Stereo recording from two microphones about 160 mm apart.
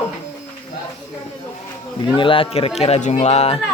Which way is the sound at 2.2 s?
35° left (ahead or behind).